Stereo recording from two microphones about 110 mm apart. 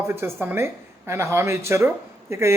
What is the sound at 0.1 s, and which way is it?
Speech, 20° right (ahead or behind).